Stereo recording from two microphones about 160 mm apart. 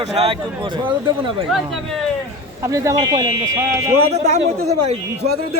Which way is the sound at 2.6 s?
20° right (ahead or behind).